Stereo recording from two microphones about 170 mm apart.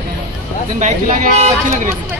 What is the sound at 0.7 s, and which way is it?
Speech, 45° right (ahead or behind).